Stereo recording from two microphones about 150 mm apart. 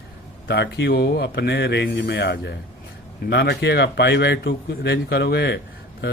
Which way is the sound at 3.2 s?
90° left.